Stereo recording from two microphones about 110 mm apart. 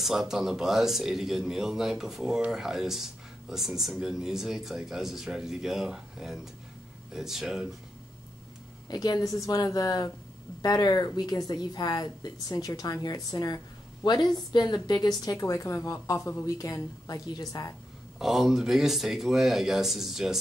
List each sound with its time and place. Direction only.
0.0 s a man's voice: centre (ahead or behind)
8.8 s a woman's voice: 35° left (ahead or behind)
18.2 s a man's voice: 5° right (ahead or behind)